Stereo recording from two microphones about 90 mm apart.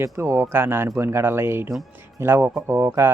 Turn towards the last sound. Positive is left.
turn(degrees=-30)  # may be behind; listen again after turning